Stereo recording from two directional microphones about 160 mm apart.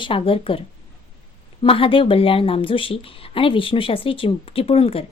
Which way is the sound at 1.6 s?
35° left (ahead or behind).